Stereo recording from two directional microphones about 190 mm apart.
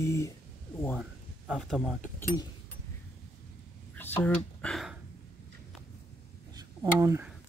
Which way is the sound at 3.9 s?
10° left (ahead or behind).